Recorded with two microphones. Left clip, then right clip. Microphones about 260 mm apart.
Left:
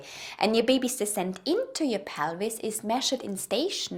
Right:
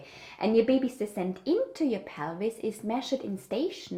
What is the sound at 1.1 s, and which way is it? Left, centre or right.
A woman's voice, left.